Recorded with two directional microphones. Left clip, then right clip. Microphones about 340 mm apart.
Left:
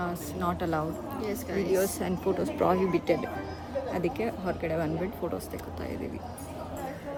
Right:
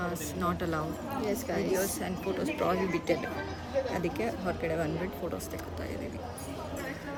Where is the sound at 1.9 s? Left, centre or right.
Centre.